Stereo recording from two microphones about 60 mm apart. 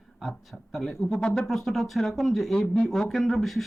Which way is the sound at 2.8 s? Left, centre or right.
Centre.